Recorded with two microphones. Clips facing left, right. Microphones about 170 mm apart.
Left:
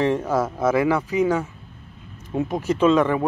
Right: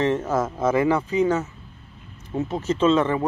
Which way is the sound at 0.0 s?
10° left (ahead or behind).